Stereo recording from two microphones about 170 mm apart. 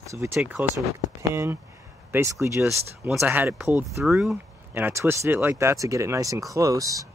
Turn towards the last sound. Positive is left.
turn(degrees=-20)  # may be behind; listen again after turning